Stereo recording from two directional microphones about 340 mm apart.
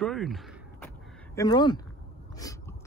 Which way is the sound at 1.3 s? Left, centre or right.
Centre.